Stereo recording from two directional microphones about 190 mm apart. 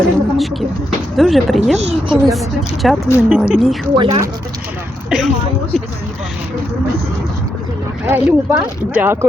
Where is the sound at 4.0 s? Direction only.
30° right (ahead or behind).